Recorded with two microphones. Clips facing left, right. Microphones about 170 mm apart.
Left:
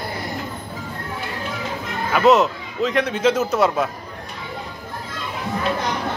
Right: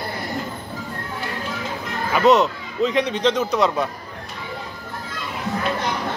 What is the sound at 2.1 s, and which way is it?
Speech, centre (ahead or behind).